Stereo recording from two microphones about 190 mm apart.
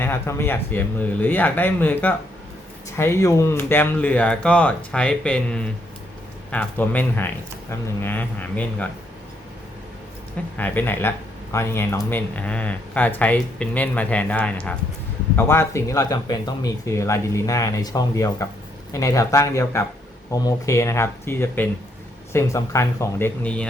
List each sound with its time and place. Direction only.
0.0 s speech: 10° left (ahead or behind)
10.6 s speech: 10° left (ahead or behind)